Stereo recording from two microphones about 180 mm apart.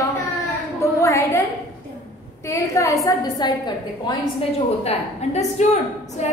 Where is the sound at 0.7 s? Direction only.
15° left (ahead or behind).